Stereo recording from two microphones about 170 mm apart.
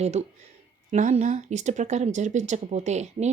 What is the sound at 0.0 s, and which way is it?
Speech, 40° right (ahead or behind).